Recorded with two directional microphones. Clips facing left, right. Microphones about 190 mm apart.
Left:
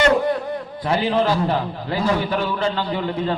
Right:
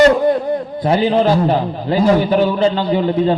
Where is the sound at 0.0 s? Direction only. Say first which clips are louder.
Right 6 dB; 40° right (ahead or behind).